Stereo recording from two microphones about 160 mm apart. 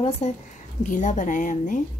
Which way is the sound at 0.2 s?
35° left (ahead or behind).